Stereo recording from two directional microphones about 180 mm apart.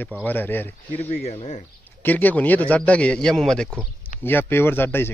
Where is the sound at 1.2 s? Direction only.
35° left (ahead or behind).